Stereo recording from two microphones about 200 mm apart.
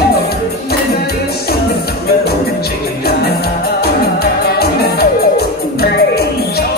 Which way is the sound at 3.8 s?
50° left (ahead or behind).